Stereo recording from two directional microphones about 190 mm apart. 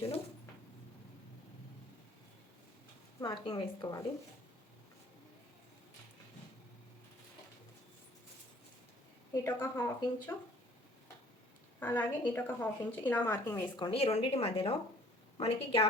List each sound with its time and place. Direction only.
3.2 s a woman's voice: 20° left (ahead or behind)
9.3 s speech: 15° left (ahead or behind)
11.8 s speech: 10° left (ahead or behind)
13.7 s a woman's voice: 25° left (ahead or behind)